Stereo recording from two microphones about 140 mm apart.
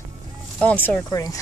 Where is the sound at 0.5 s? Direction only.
10° left (ahead or behind).